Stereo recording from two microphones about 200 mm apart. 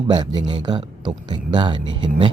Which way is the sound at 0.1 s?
20° right (ahead or behind).